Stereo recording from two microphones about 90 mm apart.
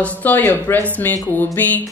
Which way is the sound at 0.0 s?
20° left (ahead or behind).